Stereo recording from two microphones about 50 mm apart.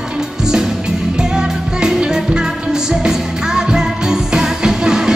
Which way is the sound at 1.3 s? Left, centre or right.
Centre.